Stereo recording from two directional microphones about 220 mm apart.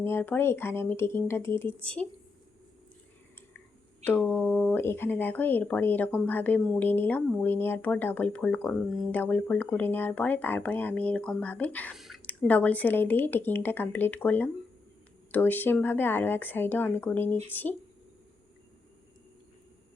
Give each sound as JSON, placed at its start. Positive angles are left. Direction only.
{"t": 0.0, "sound": "speech", "side_deg": 10}
{"t": 4.0, "sound": "speech", "side_deg": 5}